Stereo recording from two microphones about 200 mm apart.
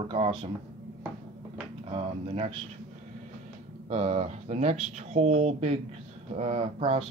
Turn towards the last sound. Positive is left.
turn(degrees=-30)  # may be behind; listen again after turning